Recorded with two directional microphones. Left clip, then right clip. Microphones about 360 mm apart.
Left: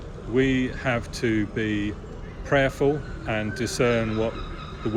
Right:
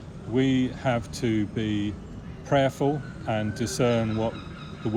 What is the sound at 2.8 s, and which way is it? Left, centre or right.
Speech, right.